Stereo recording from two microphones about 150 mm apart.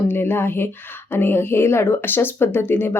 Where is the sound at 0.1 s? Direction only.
15° left (ahead or behind).